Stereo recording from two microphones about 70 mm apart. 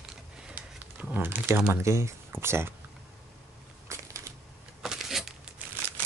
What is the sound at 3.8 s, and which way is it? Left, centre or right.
Crushing, right.